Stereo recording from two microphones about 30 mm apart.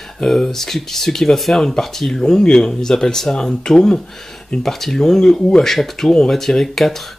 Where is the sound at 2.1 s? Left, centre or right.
Left.